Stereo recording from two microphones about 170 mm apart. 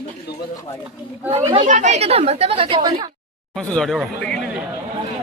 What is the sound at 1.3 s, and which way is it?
Speech, 35° right (ahead or behind).